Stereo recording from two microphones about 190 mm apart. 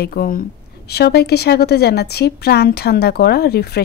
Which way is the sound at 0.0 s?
50° left (ahead or behind).